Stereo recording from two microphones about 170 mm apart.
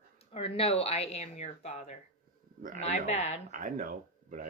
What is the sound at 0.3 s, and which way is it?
Speech, 35° left (ahead or behind).